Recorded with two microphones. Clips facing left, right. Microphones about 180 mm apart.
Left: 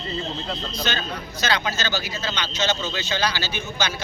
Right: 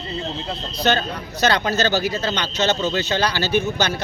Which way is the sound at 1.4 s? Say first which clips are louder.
Right 6 dB; 60° right (ahead or behind).